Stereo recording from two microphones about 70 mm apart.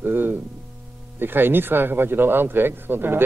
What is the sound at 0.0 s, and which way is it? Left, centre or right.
Music, right.